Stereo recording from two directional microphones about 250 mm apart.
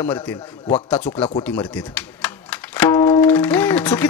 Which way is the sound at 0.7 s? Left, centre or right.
Left.